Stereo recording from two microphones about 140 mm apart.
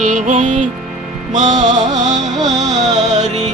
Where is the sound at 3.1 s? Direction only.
55° right (ahead or behind).